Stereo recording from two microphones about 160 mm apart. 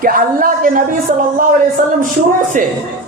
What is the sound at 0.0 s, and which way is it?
Speech, 60° right (ahead or behind).